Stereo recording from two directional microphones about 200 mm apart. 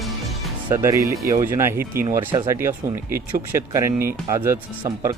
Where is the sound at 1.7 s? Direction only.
45° right (ahead or behind).